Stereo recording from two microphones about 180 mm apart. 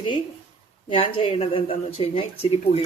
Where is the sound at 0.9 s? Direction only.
30° left (ahead or behind).